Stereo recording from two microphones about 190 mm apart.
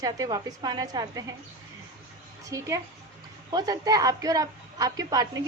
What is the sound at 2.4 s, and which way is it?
A woman's voice, 15° right (ahead or behind).